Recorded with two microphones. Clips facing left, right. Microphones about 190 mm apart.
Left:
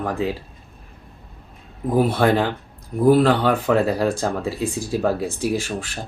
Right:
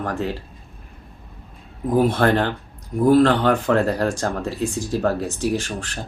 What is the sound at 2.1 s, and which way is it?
Speech, 10° left (ahead or behind).